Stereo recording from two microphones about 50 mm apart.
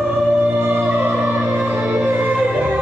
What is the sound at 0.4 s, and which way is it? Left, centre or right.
Music, right.